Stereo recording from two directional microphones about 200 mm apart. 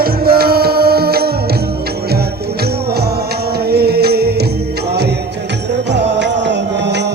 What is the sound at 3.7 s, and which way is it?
Music, 50° right (ahead or behind).